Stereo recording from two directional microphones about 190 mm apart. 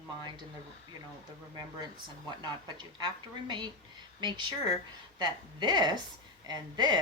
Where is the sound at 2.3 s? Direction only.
25° right (ahead or behind).